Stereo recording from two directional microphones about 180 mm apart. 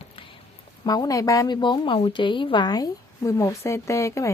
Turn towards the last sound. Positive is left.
turn(degrees=15)  # may be behind; listen again after turning